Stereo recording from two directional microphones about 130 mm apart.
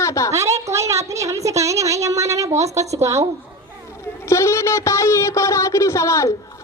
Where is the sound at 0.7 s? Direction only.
25° right (ahead or behind).